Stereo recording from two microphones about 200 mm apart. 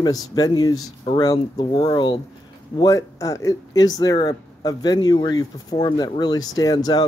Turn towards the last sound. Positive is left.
turn(degrees=20)  # may be behind; listen again after turning